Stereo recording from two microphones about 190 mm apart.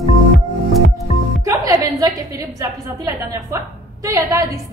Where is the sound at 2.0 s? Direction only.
20° right (ahead or behind).